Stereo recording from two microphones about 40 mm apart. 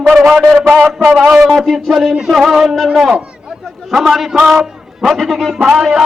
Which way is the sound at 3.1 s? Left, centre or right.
Right.